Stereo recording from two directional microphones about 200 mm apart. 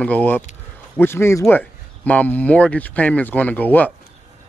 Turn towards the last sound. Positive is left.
turn(degrees=10)  # may be behind; listen again after turning